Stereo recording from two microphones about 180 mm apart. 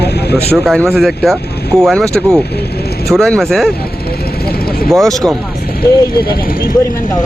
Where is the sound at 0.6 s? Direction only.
Centre (ahead or behind).